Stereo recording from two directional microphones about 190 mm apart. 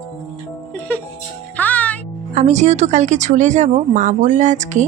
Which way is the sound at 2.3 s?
40° right (ahead or behind).